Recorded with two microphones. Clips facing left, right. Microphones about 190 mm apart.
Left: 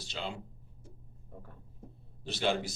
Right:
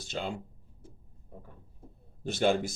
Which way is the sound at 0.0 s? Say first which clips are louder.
Right 4 dB; 50° right (ahead or behind).